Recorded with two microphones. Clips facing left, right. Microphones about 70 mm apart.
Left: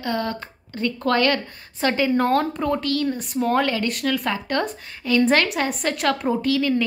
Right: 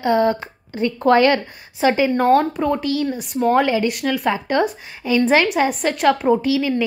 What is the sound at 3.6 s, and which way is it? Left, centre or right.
Speech, centre.